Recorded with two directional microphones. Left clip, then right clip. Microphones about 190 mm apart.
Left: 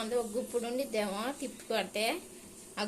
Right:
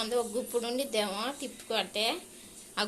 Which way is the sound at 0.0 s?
5° left (ahead or behind).